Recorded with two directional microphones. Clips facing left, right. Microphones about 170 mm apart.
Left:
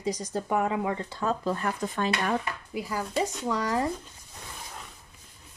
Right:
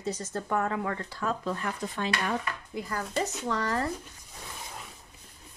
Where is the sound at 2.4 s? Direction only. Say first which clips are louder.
Left 2 dB; 10° left (ahead or behind).